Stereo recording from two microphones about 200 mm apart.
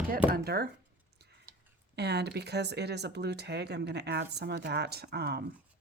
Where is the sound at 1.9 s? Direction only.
55° right (ahead or behind).